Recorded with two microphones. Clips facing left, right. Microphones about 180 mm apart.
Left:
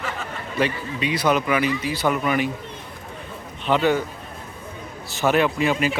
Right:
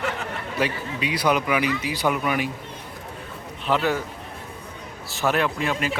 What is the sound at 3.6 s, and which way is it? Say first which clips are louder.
Speech: left 3 dB; centre (ahead or behind).